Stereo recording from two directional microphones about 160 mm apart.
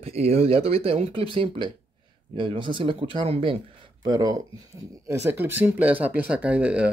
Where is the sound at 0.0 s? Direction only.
40° right (ahead or behind).